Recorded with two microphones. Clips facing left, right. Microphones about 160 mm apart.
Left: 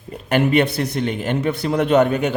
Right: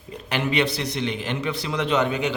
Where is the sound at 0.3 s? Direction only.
50° left (ahead or behind).